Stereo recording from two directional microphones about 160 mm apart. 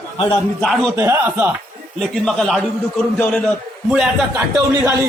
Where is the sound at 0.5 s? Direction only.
Centre (ahead or behind).